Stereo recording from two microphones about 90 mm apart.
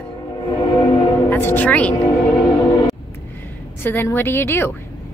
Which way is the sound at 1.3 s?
25° left (ahead or behind).